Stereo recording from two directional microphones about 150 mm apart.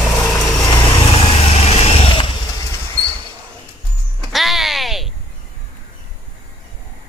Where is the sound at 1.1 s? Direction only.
40° left (ahead or behind).